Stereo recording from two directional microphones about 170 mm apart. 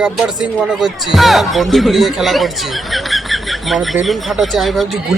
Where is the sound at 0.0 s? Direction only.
5° right (ahead or behind).